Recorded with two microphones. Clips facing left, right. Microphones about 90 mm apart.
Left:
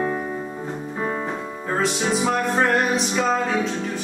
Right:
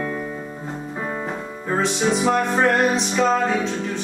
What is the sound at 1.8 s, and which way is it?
Music, centre (ahead or behind).